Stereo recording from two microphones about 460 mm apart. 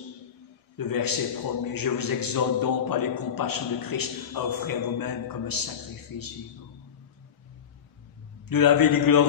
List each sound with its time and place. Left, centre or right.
0.7 s a man's voice: left
8.5 s a man's voice: left